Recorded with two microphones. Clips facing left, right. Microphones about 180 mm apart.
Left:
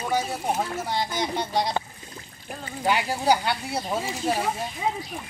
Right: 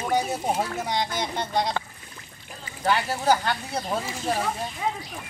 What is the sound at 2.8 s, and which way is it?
Speech, 15° left (ahead or behind).